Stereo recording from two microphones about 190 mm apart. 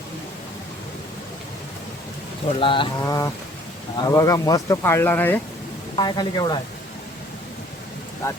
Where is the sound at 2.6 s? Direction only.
25° left (ahead or behind).